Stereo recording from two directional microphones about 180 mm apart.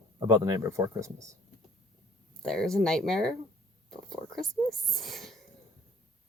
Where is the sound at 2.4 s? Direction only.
5° left (ahead or behind).